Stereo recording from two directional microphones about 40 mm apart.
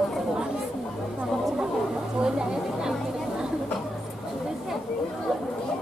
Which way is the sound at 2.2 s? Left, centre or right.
Centre.